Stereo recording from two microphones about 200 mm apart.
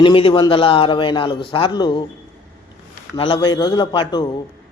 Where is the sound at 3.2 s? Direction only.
25° left (ahead or behind).